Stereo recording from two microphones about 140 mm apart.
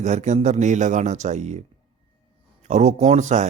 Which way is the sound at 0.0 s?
60° right (ahead or behind).